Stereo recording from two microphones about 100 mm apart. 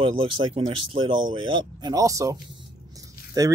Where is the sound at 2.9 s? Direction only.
35° right (ahead or behind).